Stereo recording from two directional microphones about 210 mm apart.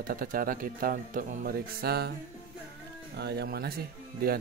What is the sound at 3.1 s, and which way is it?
Speech, 50° right (ahead or behind).